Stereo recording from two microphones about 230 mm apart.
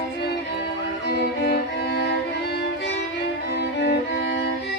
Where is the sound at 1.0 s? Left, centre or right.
Left.